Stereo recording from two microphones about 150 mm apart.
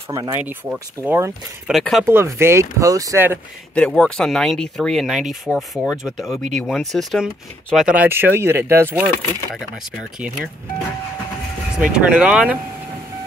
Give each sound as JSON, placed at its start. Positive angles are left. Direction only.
{"t": 0.1, "sound": "speech", "side_deg": -20}
{"t": 0.4, "sound": "speech", "side_deg": -10}
{"t": 1.7, "sound": "speech", "side_deg": 0}
{"t": 2.0, "sound": "speech", "side_deg": -15}
{"t": 3.7, "sound": "speech", "side_deg": 5}
{"t": 11.7, "sound": "speech", "side_deg": -5}